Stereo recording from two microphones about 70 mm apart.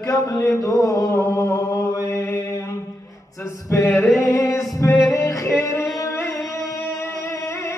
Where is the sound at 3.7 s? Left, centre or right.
Left.